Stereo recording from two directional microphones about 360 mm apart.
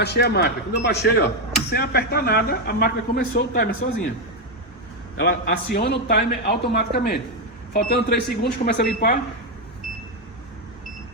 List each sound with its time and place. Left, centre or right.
0.0 s speech: left
5.2 s speech: left